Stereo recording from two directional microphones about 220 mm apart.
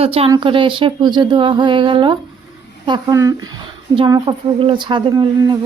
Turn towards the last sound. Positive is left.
turn(degrees=-20)  # may be behind; listen again after turning